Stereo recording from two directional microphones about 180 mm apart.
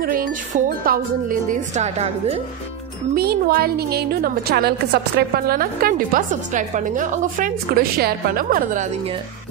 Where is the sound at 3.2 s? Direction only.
60° right (ahead or behind).